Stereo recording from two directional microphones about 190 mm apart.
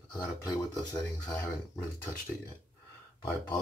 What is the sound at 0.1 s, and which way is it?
Speech, 15° left (ahead or behind).